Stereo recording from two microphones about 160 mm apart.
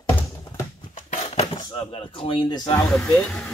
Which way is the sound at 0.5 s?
40° left (ahead or behind).